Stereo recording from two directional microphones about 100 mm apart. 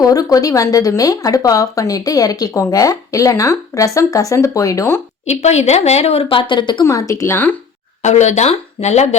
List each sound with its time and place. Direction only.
0.0 s speech: 35° left (ahead or behind)
5.3 s a woman's voice: 90° left; by 6.8 s 50° left (ahead or behind)
6.8 s speech: 35° left (ahead or behind)
8.4 s speech: 90° left